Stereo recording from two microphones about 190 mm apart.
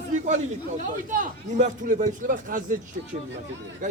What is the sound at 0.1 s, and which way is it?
A man's voice, 40° right (ahead or behind).